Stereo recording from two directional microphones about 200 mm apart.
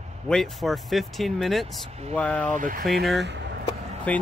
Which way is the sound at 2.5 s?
40° right (ahead or behind).